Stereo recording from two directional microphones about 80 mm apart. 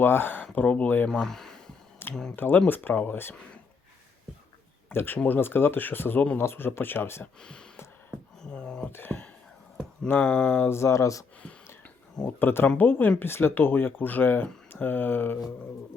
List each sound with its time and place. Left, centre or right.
0.0 s speech: left
0.5 s speech: centre
1.1 s a sound: centre
2.3 s speech: left
4.9 s speech: left
7.4 s a sound: centre
8.9 s speech: left
10.7 s speech: left
12.4 s speech: left